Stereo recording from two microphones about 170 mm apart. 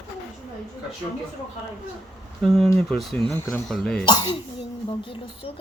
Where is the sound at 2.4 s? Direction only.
Centre (ahead or behind).